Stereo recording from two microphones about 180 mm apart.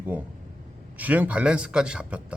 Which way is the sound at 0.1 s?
10° right (ahead or behind).